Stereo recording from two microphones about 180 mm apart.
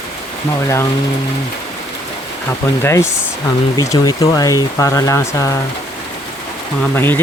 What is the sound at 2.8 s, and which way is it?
Speech, 15° left (ahead or behind).